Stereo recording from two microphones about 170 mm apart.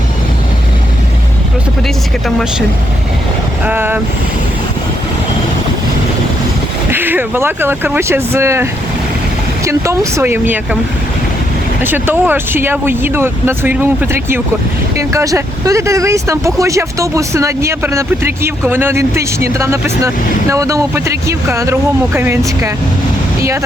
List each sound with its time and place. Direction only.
2.2 s speech: 5° right (ahead or behind)
3.7 s speech: 10° right (ahead or behind)
6.9 s speech: 10° right (ahead or behind)
9.6 s speech: 15° right (ahead or behind)
11.8 s speech: 10° right (ahead or behind)